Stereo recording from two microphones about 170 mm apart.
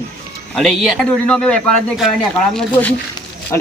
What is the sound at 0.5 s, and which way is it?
Speech, centre (ahead or behind).